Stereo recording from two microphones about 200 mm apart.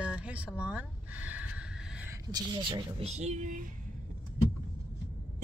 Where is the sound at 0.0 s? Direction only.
5° right (ahead or behind).